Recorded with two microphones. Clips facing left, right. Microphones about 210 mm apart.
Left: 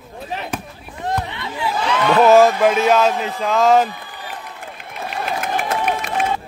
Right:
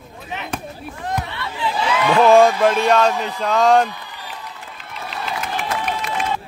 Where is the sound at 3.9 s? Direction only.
50° left (ahead or behind).